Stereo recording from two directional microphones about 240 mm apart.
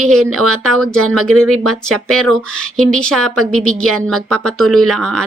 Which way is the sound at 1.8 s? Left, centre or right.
Centre.